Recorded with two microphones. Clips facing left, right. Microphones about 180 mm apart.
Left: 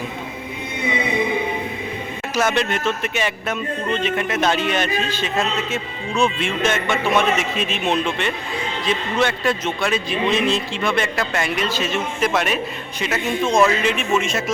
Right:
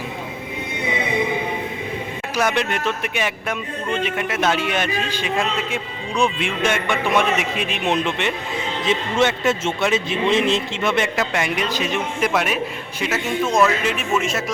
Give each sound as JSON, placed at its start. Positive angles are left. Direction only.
{"t": 2.3, "sound": "a man's voice", "side_deg": -10}